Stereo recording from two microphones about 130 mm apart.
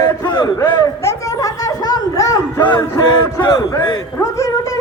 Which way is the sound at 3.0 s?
35° left (ahead or behind).